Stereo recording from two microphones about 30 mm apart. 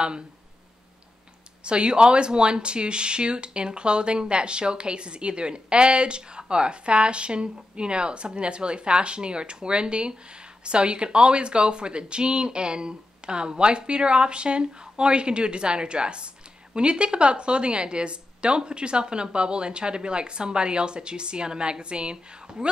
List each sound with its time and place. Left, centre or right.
1.6 s speech: right